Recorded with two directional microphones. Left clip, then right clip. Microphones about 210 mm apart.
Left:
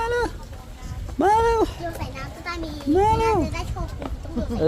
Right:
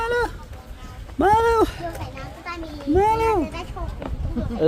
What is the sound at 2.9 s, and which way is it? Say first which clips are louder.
Speech: right 1 dB; centre (ahead or behind).